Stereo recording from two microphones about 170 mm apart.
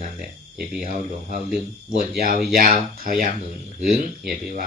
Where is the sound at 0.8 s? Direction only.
50° right (ahead or behind).